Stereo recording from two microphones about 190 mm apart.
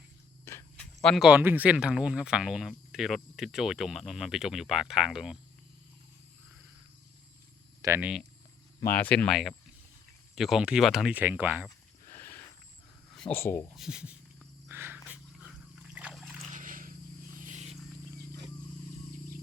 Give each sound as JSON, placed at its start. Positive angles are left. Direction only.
{"t": 0.4, "sound": "horse", "side_deg": 15}
{"t": 1.0, "sound": "speech", "side_deg": 0}
{"t": 7.8, "sound": "speech", "side_deg": -15}
{"t": 8.9, "sound": "speech", "side_deg": 10}
{"t": 12.0, "sound": "a sound", "side_deg": 15}
{"t": 13.1, "sound": "speech", "side_deg": 5}
{"t": 13.7, "sound": "speech", "side_deg": -5}
{"t": 14.7, "sound": "trickle", "side_deg": -10}
{"t": 16.5, "sound": "a sound", "side_deg": -45}
{"t": 17.4, "sound": "wild animals", "side_deg": -40}